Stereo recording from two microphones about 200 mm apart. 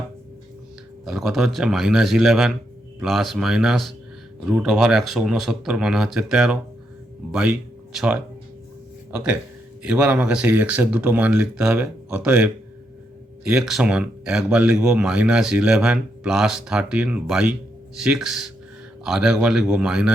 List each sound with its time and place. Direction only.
1.0 s speech: 5° right (ahead or behind)